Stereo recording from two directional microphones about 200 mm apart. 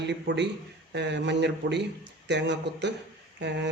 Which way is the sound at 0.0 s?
60° right (ahead or behind).